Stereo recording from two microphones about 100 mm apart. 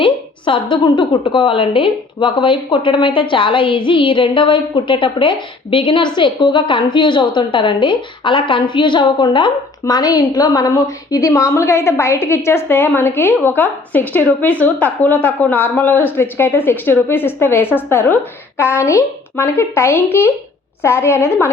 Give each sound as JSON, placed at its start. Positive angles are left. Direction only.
{"t": 0.0, "sound": "a woman's voice", "side_deg": 55}